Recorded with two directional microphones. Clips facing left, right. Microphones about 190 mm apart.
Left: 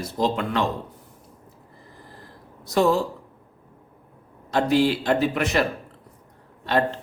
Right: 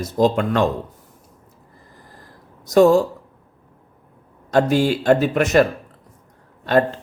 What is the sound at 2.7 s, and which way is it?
Speech, 45° right (ahead or behind).